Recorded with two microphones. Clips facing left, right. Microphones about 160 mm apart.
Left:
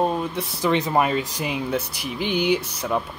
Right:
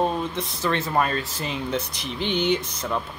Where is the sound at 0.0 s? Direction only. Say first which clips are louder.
Left 1 dB; 10° left (ahead or behind).